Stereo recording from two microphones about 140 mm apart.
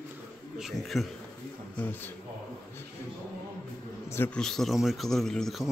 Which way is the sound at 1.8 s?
15° left (ahead or behind).